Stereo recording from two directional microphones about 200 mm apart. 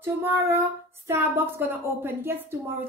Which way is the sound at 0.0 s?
10° right (ahead or behind).